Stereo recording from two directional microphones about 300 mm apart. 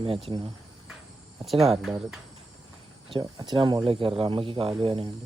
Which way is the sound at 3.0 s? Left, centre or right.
Centre.